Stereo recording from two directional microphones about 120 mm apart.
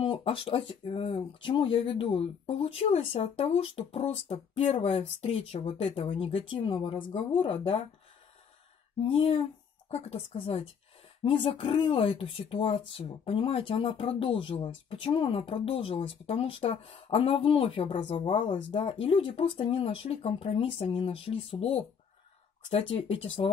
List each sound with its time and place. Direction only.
0.0 s speech: 50° left (ahead or behind)
9.0 s speech: 55° left (ahead or behind)
18.8 s speech: 50° left (ahead or behind)